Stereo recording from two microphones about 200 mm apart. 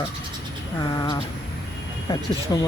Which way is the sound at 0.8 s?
20° left (ahead or behind).